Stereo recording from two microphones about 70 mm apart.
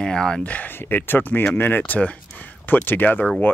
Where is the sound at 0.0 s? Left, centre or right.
Centre.